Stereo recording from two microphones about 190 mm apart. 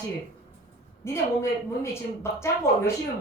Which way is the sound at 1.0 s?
15° left (ahead or behind).